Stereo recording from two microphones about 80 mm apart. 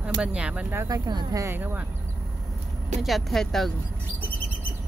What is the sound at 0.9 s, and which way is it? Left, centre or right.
Speech, right.